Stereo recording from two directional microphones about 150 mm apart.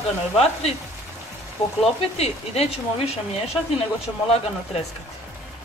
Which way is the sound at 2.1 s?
45° left (ahead or behind).